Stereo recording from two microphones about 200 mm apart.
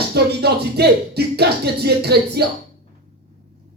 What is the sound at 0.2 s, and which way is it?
Speech, 55° right (ahead or behind).